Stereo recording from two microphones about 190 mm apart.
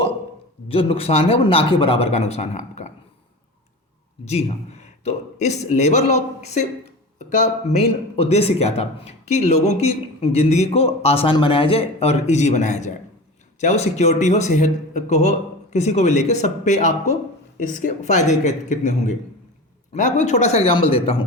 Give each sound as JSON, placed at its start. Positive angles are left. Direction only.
{"t": 0.7, "sound": "speech", "side_deg": 30}
{"t": 4.3, "sound": "speech", "side_deg": 35}